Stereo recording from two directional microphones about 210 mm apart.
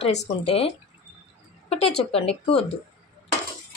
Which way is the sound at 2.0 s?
30° left (ahead or behind).